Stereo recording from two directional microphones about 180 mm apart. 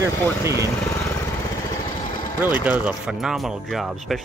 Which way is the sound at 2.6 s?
5° right (ahead or behind).